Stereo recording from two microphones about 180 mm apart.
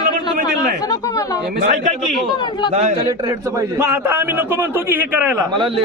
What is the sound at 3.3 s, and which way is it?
A man's voice, 15° right (ahead or behind).